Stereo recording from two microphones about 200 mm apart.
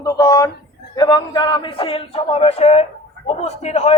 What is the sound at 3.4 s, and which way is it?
Speech, 35° left (ahead or behind).